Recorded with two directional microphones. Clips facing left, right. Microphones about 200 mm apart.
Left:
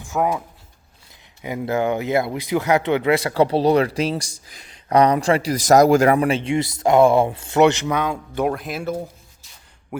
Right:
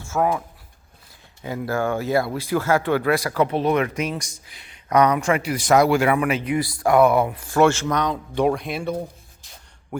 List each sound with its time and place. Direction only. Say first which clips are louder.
0.0 s speech: even; 15° left (ahead or behind)